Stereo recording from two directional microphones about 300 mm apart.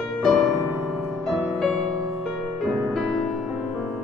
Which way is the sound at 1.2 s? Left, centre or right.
Centre.